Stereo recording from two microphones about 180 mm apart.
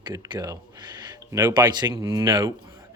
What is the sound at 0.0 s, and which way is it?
Speech, 20° right (ahead or behind).